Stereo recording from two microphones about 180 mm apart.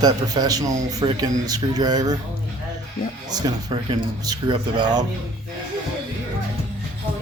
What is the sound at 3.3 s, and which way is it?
A man's voice, 25° right (ahead or behind).